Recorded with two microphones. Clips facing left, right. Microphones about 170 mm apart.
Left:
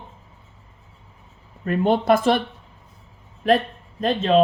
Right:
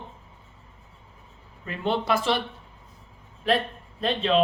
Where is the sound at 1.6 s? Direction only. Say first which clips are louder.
Left 8 dB; 50° left (ahead or behind).